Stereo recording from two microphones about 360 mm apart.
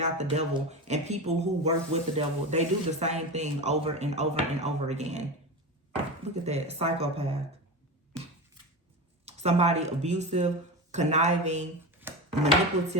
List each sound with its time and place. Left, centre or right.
0.0 s speech: centre
6.4 s speech: centre
8.1 s a sound: centre
9.2 s speech: centre
11.9 s chopping: centre